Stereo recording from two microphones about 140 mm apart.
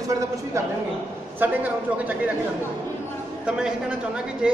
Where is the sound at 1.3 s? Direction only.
10° right (ahead or behind).